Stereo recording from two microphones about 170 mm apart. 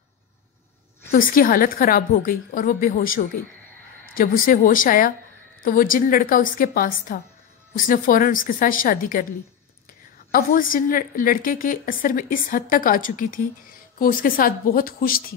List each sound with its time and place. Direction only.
1.1 s a woman's voice: 55° left (ahead or behind)
10.3 s a woman's voice: 55° left (ahead or behind)